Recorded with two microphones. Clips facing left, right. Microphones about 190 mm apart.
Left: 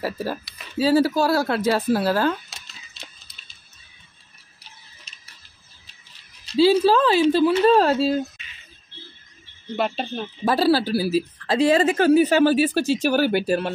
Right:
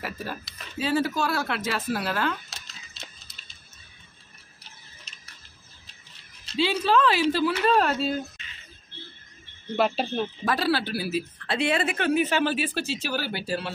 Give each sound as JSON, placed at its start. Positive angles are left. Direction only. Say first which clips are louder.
{"t": 0.0, "sound": "speech", "louder": "left 7 dB", "side_deg": 35}
{"t": 6.5, "sound": "speech", "louder": "left 7 dB", "side_deg": 35}
{"t": 9.8, "sound": "speech", "louder": "right 1 dB", "side_deg": 0}
{"t": 10.4, "sound": "speech", "louder": "left 9 dB", "side_deg": 35}